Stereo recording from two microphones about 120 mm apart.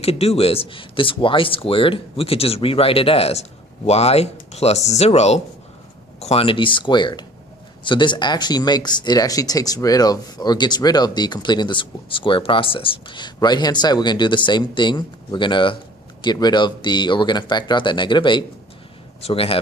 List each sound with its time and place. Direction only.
0.0 s speech: 55° left (ahead or behind); by 18.4 s 40° left (ahead or behind)
19.2 s speech: 55° left (ahead or behind)